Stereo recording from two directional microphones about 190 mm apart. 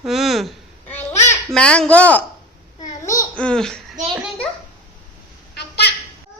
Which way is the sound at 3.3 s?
5° left (ahead or behind).